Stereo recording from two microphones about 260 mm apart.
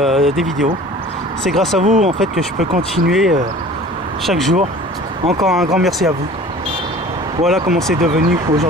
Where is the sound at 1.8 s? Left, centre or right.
Right.